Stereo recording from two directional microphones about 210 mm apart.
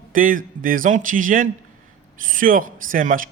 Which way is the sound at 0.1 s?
40° right (ahead or behind).